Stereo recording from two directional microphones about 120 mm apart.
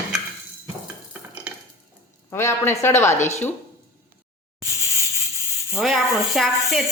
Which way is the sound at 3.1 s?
75° left (ahead or behind).